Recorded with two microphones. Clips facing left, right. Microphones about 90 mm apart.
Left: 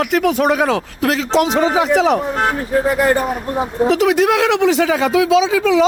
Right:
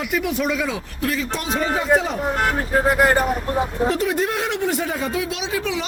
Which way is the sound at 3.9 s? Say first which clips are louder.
Left 8 dB; 90° left.